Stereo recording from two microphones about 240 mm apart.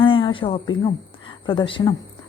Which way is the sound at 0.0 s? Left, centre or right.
Left.